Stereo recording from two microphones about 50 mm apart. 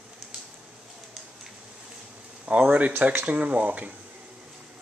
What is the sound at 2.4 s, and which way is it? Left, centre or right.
Speech, right.